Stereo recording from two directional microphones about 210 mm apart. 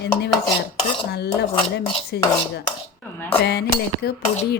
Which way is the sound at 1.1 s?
50° left (ahead or behind).